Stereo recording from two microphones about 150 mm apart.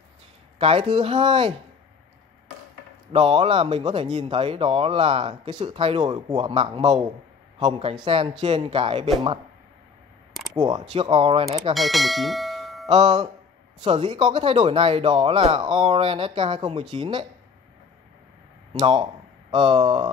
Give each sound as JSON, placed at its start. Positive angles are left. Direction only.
{"t": 0.6, "sound": "speech", "side_deg": -40}
{"t": 3.1, "sound": "speech", "side_deg": -40}
{"t": 8.0, "sound": "speech", "side_deg": -35}
{"t": 10.5, "sound": "speech", "side_deg": -30}
{"t": 11.7, "sound": "speech", "side_deg": 0}
{"t": 12.8, "sound": "speech", "side_deg": -30}
{"t": 18.7, "sound": "speech", "side_deg": -35}